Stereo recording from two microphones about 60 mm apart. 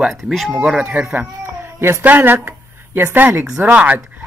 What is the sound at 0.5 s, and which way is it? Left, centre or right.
Speech, centre.